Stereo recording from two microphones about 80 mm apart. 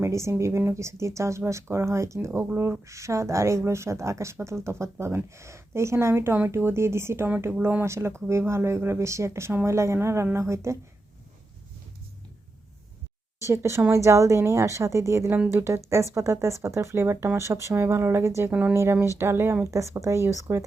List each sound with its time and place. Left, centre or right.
0.0 s speech: right
7.3 s speech: right
13.4 s a woman's voice: right